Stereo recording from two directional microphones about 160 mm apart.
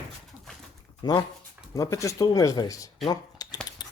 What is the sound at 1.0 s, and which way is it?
Speech, 25° left (ahead or behind).